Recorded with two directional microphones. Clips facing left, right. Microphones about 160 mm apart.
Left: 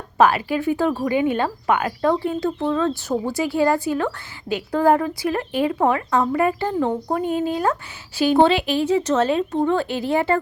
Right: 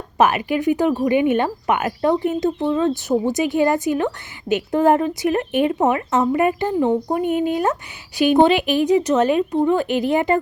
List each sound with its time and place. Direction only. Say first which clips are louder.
0.2 s a woman's voice: even; 20° right (ahead or behind)